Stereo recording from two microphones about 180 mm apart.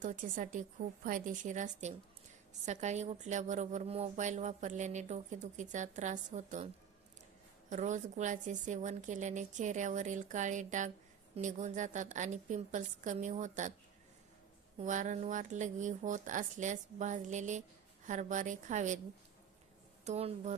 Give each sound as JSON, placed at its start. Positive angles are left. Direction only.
{"t": 0.0, "sound": "a woman's voice", "side_deg": -45}
{"t": 7.7, "sound": "a woman's voice", "side_deg": -40}
{"t": 14.8, "sound": "a woman's voice", "side_deg": -45}
{"t": 20.1, "sound": "a woman's voice", "side_deg": -35}